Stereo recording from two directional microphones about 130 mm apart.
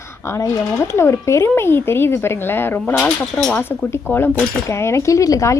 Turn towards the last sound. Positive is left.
turn(degrees=25)  # may be behind; listen again after turning